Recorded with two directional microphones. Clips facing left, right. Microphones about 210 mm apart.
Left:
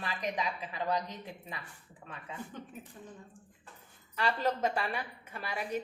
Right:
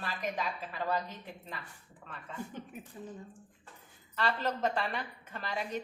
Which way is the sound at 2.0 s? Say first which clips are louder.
Left 1 dB; 35° left (ahead or behind).